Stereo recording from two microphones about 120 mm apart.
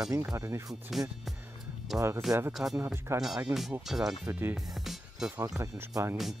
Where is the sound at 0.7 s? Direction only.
Centre (ahead or behind).